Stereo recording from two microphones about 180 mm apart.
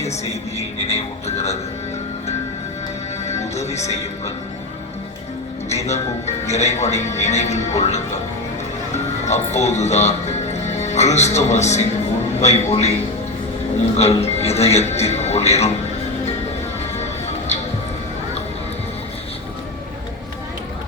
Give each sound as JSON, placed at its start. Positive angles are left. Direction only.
{"t": 0.0, "sound": "speech", "side_deg": 35}
{"t": 3.2, "sound": "music", "side_deg": 40}
{"t": 5.6, "sound": "a man's voice", "side_deg": 40}
{"t": 13.9, "sound": "speech", "side_deg": 35}
{"t": 17.0, "sound": "music", "side_deg": 35}